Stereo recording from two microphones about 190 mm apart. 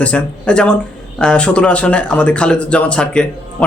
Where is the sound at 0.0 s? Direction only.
5° left (ahead or behind).